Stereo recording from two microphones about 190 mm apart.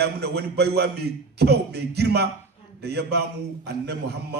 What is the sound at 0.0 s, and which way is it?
A man's voice, 55° right (ahead or behind).